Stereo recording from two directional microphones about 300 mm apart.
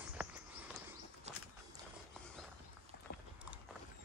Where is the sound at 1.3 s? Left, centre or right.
Right.